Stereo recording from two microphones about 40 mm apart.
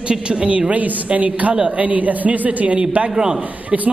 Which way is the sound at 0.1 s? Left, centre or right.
Right.